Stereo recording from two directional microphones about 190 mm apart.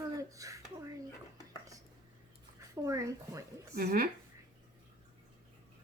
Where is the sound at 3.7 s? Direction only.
55° right (ahead or behind).